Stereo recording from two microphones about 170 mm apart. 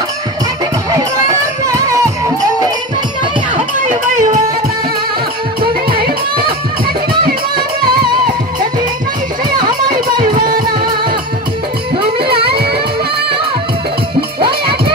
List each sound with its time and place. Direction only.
0.9 s music: 20° right (ahead or behind)
3.5 s a sound: 45° right (ahead or behind)
5.6 s music: 60° right (ahead or behind)
10.2 s music: 55° right (ahead or behind)
12.2 s music: 30° right (ahead or behind)